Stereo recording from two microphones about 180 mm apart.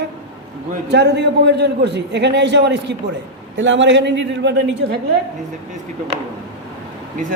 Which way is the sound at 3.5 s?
90° right.